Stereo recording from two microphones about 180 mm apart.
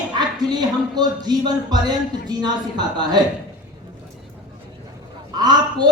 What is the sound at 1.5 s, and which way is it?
Speech, 25° right (ahead or behind).